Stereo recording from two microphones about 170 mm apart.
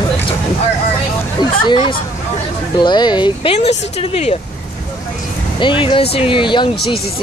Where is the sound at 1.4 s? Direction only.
30° left (ahead or behind).